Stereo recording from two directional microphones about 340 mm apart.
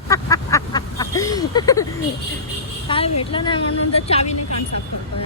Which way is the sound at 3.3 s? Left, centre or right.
Centre.